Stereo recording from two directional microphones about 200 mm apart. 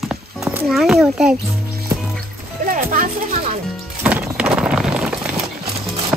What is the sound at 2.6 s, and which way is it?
Music, 45° right (ahead or behind).